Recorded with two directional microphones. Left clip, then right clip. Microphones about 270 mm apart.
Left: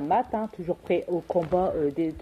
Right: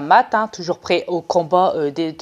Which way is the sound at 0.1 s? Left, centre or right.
Right.